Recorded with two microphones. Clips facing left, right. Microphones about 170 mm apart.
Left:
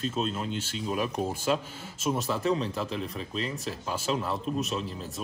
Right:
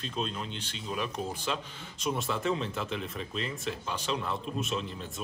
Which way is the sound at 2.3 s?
35° left (ahead or behind).